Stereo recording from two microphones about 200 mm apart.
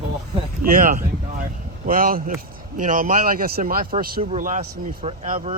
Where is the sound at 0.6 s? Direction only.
45° right (ahead or behind).